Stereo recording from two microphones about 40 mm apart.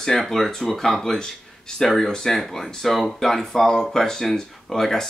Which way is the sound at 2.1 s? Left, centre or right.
Centre.